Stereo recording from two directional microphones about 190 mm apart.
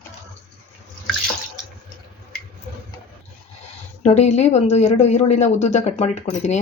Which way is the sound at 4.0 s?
35° left (ahead or behind).